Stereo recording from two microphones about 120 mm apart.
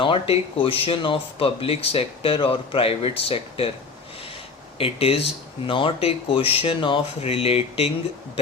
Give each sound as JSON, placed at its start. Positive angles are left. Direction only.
{"t": 0.0, "sound": "speech", "side_deg": 50}
{"t": 4.8, "sound": "speech", "side_deg": 55}
{"t": 7.2, "sound": "speech", "side_deg": 55}